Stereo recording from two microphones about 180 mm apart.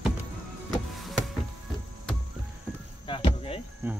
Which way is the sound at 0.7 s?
Centre (ahead or behind).